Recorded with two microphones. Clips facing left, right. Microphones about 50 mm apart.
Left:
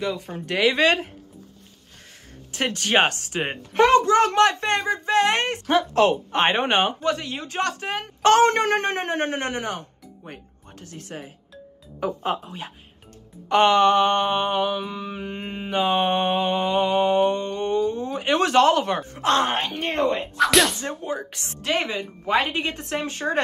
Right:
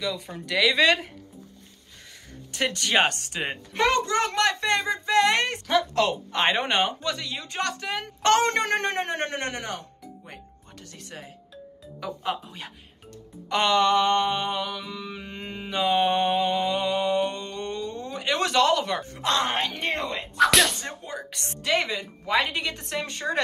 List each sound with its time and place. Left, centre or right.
0.0 s mantra: left
2.5 s mantra: left
20.3 s music: centre
20.8 s speech: left
21.6 s mantra: left